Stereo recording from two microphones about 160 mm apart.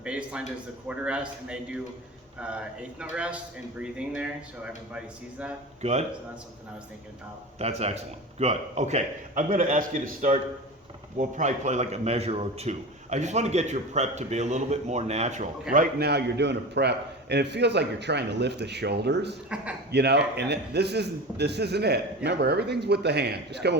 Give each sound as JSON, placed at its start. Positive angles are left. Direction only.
{"t": 0.0, "sound": "a sound", "side_deg": -5}
{"t": 0.9, "sound": "speech", "side_deg": -5}
{"t": 3.0, "sound": "speech", "side_deg": -5}
{"t": 5.8, "sound": "a man's voice", "side_deg": -45}
{"t": 7.6, "sound": "a man's voice", "side_deg": -40}
{"t": 15.7, "sound": "a man's voice", "side_deg": -70}